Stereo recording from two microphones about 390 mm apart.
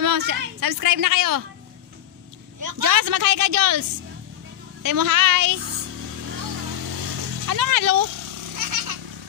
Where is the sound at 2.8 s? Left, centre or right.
Right.